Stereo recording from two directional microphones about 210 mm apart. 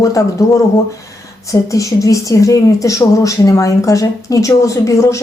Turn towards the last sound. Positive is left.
turn(degrees=15)  # may be behind; listen again after turning